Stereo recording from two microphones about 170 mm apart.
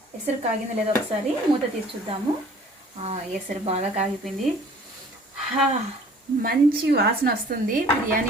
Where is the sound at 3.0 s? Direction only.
40° right (ahead or behind).